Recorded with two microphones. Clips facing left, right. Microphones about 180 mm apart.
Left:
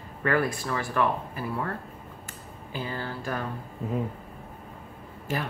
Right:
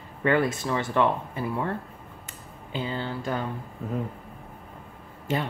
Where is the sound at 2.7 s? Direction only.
20° right (ahead or behind).